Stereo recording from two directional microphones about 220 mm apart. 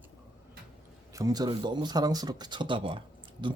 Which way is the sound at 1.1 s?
15° right (ahead or behind).